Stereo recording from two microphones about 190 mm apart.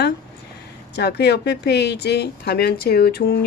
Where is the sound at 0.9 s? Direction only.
60° left (ahead or behind).